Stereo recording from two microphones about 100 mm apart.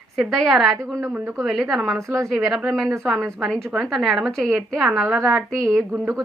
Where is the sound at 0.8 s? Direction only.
30° right (ahead or behind).